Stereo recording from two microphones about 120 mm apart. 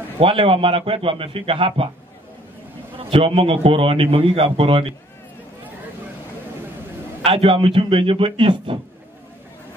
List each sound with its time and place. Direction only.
0.2 s a man's voice: 50° right (ahead or behind)
3.0 s a man's voice: 50° right (ahead or behind)
7.2 s a man's voice: 50° right (ahead or behind)